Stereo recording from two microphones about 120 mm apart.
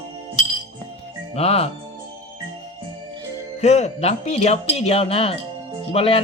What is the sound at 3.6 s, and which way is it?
Speech, 65° left (ahead or behind).